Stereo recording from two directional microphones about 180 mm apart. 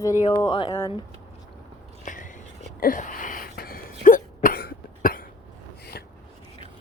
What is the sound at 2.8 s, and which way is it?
Cough, 50° left (ahead or behind).